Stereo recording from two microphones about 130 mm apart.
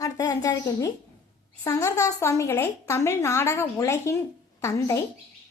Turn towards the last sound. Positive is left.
turn(degrees=25)  # may be behind; listen again after turning